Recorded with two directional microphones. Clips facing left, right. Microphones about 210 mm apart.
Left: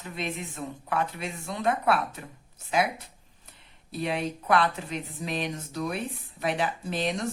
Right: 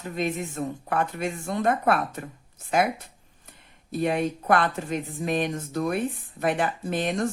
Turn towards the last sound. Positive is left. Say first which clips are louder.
# right 3 dB
turn(degrees=-50)  # may be behind; listen again after turning